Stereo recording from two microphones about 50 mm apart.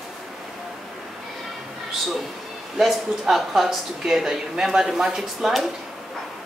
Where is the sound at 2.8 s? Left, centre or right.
Centre.